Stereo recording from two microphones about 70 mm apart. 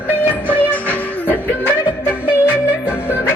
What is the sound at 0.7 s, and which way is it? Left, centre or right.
Music, left.